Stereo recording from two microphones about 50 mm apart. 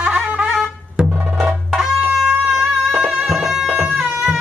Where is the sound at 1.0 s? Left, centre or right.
Centre.